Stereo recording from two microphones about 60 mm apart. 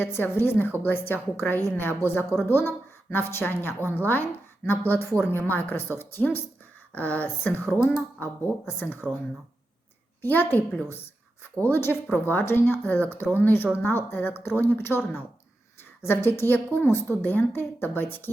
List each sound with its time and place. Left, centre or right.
0.0 s a woman's voice: left
6.9 s a woman's voice: left
10.2 s a woman's voice: left